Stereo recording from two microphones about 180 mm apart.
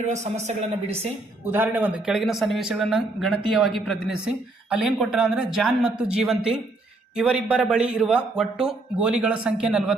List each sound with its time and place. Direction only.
0.0 s speech: 40° right (ahead or behind)
1.5 s speech: 10° right (ahead or behind)